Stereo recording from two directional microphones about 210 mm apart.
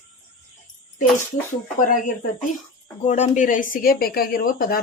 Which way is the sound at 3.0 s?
35° left (ahead or behind).